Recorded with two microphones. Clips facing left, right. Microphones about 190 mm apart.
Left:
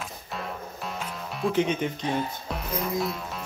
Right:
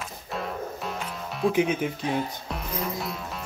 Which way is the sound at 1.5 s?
5° right (ahead or behind).